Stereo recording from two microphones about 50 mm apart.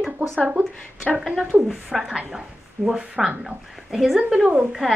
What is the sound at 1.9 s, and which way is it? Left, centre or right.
Speech, centre.